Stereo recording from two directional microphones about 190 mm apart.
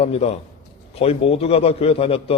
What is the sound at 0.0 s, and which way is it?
A man's voice, 35° left (ahead or behind).